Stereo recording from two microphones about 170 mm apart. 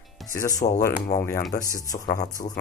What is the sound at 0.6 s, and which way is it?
Speech, 40° left (ahead or behind).